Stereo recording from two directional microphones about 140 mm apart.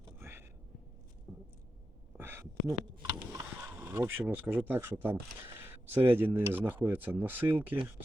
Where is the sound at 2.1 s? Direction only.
15° right (ahead or behind).